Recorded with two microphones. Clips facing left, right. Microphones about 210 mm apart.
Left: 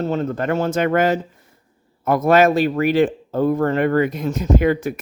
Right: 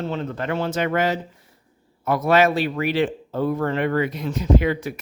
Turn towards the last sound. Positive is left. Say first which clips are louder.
# left 3 dB
turn(degrees=50)  # may be behind; listen again after turning